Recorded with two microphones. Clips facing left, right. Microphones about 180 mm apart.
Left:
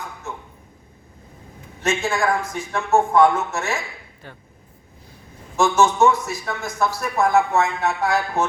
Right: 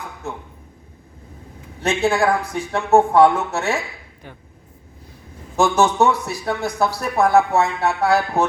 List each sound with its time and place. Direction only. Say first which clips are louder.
1.8 s a man's voice: right 4 dB; 35° right (ahead or behind)
5.5 s a man's voice: right 1 dB; 35° right (ahead or behind)